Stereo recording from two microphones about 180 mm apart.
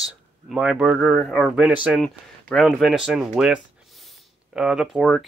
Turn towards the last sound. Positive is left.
turn(degrees=0)  # may be behind; listen again after turning